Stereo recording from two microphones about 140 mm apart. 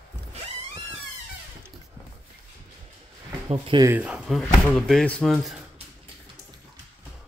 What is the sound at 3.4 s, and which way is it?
Speech, 40° right (ahead or behind).